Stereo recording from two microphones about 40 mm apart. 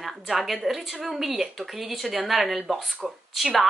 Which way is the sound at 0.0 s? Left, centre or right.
Centre.